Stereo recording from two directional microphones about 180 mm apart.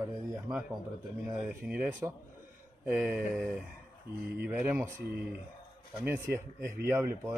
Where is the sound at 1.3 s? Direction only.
10° right (ahead or behind).